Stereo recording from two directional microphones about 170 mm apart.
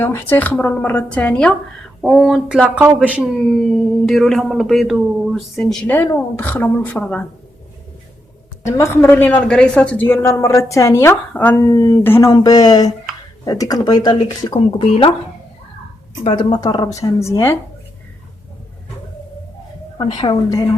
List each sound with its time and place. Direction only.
0.0 s speech: 15° left (ahead or behind)
8.6 s speech: 15° left (ahead or behind); by 15.1 s 30° left (ahead or behind)
16.2 s speech: 30° left (ahead or behind)
20.0 s speech: 25° left (ahead or behind)